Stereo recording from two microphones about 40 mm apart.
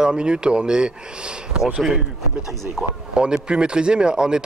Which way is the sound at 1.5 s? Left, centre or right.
Centre.